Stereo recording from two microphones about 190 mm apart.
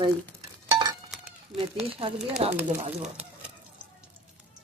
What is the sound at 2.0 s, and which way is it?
Speech, 30° right (ahead or behind).